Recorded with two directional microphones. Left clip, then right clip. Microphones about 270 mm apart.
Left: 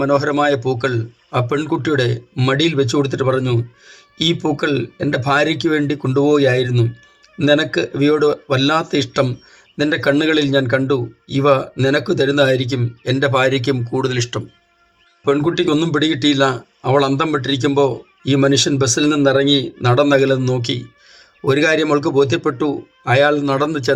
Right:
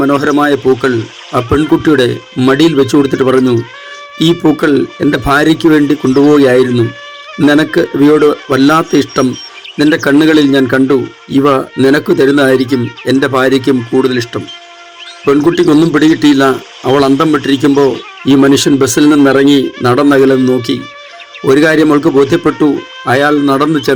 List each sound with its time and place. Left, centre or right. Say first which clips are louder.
0.0 s speech: right 5 dB; right